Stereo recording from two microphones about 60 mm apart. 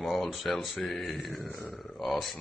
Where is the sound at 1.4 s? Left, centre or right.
Left.